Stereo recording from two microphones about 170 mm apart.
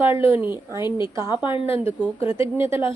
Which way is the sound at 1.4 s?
30° left (ahead or behind).